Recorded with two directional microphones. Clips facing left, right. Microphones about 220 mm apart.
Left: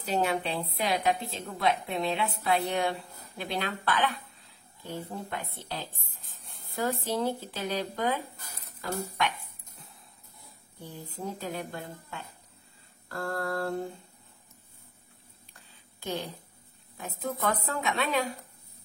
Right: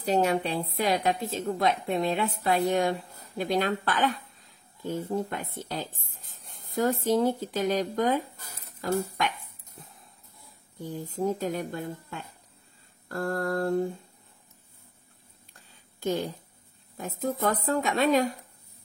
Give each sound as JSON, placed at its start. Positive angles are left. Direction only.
{"t": 0.0, "sound": "a woman's voice", "side_deg": -40}
{"t": 10.8, "sound": "a woman's voice", "side_deg": -45}
{"t": 15.7, "sound": "a sound", "side_deg": -45}
{"t": 16.9, "sound": "speech", "side_deg": -40}